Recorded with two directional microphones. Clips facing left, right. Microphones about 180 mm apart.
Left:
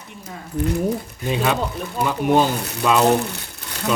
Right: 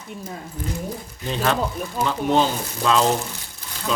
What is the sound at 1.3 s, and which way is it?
Speech, 5° left (ahead or behind).